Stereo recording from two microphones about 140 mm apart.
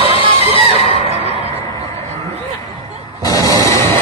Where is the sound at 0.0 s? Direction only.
40° right (ahead or behind).